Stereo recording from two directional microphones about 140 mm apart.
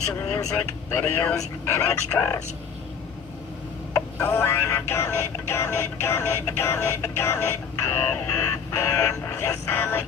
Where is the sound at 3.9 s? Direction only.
15° left (ahead or behind).